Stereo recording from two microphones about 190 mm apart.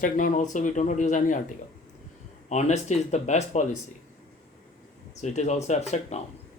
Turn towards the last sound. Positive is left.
turn(degrees=35)  # may be behind; listen again after turning